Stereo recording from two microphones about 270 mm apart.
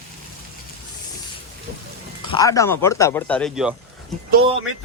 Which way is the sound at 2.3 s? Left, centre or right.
Centre.